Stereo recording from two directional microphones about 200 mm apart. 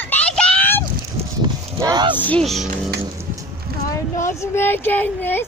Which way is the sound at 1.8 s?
20° right (ahead or behind).